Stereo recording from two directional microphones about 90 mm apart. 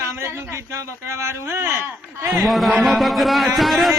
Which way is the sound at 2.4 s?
Centre (ahead or behind).